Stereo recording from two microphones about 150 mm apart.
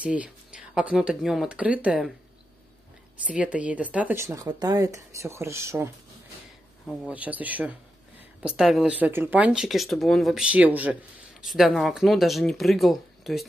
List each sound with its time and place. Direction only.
0.0 s speech: 10° right (ahead or behind)
3.3 s speech: 10° right (ahead or behind)
6.9 s speech: 10° right (ahead or behind)